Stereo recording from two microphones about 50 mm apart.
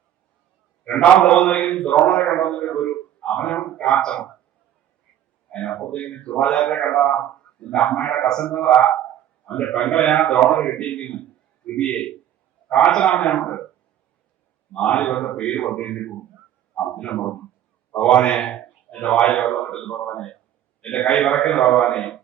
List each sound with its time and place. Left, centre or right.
0.9 s a man's voice: centre
5.5 s a man's voice: left
14.7 s a man's voice: left